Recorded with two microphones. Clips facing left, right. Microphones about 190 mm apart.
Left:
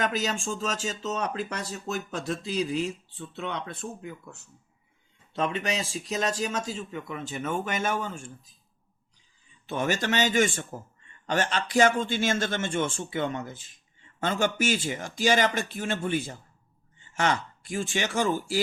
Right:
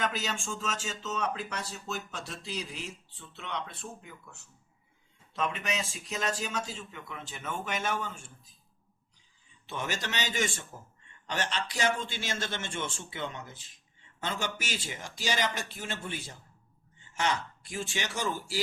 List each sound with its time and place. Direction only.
0.0 s a man's voice: 45° left (ahead or behind)
5.3 s speech: 30° left (ahead or behind); by 7.9 s 50° left (ahead or behind)
9.6 s a man's voice: 50° left (ahead or behind)
17.6 s a man's voice: 50° left (ahead or behind)